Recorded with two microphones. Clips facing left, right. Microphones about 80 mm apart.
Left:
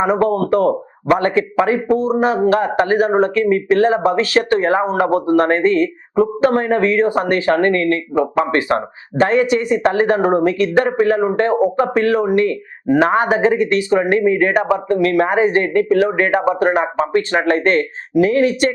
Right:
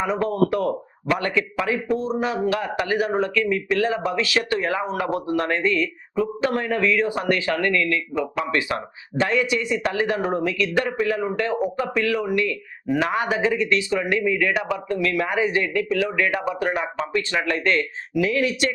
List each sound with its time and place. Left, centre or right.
0.0 s speech: left